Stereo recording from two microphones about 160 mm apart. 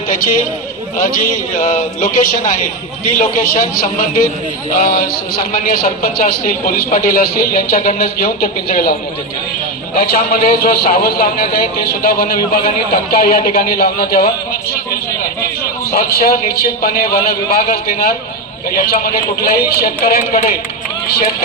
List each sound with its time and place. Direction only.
0.9 s a man's voice: 60° left (ahead or behind)
10.0 s a man's voice: 70° left (ahead or behind)
15.9 s a man's voice: 75° left (ahead or behind)